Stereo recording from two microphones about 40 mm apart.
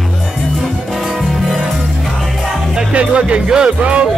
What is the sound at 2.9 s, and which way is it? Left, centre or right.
Speech, right.